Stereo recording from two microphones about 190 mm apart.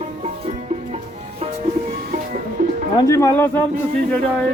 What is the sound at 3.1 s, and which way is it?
Speech, 15° left (ahead or behind).